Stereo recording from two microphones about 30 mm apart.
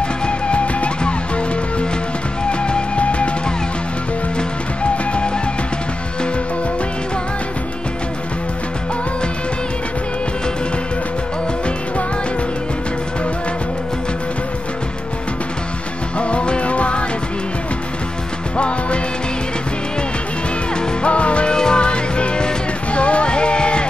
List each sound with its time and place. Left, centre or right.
0.5 s music: left
2.6 s music: left
16.2 s music: left
21.0 s music: left
21.5 s music: left